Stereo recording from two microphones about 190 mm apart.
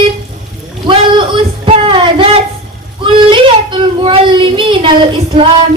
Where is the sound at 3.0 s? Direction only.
25° right (ahead or behind).